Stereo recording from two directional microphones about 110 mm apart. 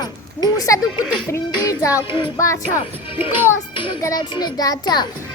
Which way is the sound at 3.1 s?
55° left (ahead or behind).